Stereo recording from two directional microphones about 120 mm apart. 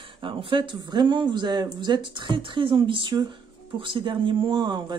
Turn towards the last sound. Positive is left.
turn(degrees=-40)  # may be behind; listen again after turning